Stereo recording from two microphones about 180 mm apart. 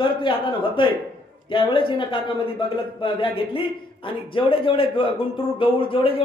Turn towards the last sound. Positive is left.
turn(degrees=30)  # may be behind; listen again after turning